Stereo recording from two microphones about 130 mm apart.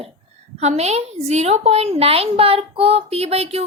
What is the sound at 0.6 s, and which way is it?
A woman's voice, 60° right (ahead or behind).